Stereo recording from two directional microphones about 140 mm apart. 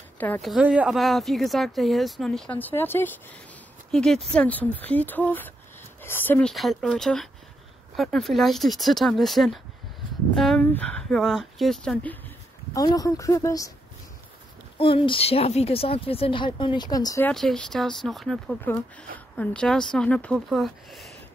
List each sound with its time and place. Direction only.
0.4 s speech: 5° right (ahead or behind); by 3.3 s 15° left (ahead or behind)
3.9 s speech: 5° left (ahead or behind)
6.5 s speech: centre (ahead or behind)
12.7 s speech: 25° left (ahead or behind)
14.8 s speech: 40° left (ahead or behind)
17.3 s speech: 5° left (ahead or behind)